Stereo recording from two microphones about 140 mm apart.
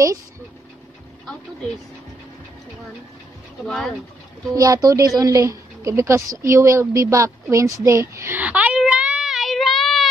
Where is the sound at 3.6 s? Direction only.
Centre (ahead or behind).